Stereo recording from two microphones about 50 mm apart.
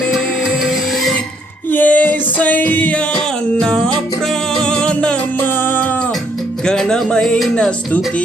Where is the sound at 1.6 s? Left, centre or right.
Left.